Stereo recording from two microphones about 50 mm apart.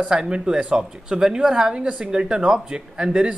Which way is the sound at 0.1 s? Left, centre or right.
Centre.